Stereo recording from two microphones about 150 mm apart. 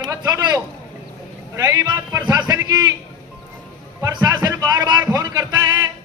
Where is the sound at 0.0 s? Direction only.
25° right (ahead or behind).